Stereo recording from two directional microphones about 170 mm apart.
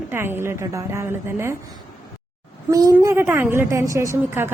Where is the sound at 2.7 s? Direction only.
20° right (ahead or behind).